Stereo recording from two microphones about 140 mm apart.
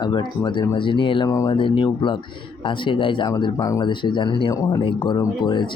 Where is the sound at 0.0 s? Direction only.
35° left (ahead or behind).